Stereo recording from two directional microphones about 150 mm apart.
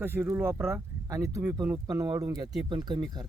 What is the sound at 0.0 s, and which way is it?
Speech, 15° right (ahead or behind).